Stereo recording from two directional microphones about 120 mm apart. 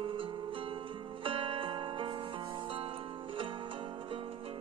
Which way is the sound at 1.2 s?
50° right (ahead or behind).